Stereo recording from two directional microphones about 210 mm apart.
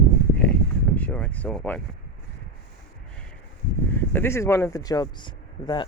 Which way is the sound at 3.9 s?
10° left (ahead or behind).